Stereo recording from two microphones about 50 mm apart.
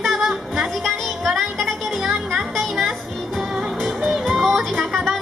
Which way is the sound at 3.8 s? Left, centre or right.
Centre.